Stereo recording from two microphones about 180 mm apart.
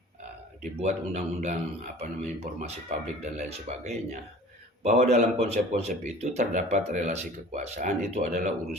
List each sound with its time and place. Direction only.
0.6 s speech: 40° right (ahead or behind)